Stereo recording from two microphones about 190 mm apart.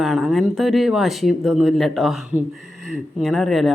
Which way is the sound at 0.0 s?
Centre (ahead or behind).